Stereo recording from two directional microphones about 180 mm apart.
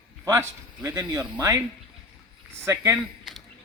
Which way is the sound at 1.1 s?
25° right (ahead or behind).